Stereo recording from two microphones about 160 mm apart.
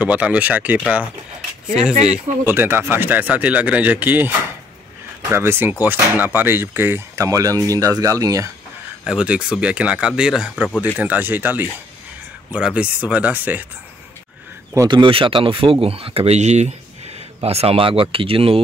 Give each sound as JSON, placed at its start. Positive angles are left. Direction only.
{"t": 0.0, "sound": "speech", "side_deg": -10}
{"t": 2.0, "sound": "speech", "side_deg": -15}
{"t": 9.0, "sound": "speech", "side_deg": -5}
{"t": 14.9, "sound": "speech", "side_deg": -35}